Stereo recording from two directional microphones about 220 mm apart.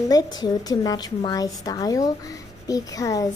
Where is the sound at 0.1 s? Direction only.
20° left (ahead or behind).